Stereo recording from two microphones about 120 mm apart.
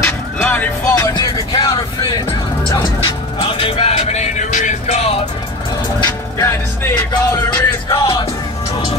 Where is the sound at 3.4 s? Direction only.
50° left (ahead or behind).